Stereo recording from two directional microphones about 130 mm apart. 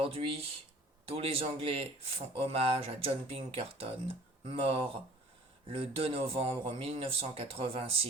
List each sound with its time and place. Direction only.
0.0 s speech: 45° right (ahead or behind)